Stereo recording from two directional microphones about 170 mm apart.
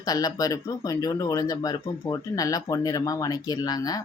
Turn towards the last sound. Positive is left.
turn(degrees=20)  # may be behind; listen again after turning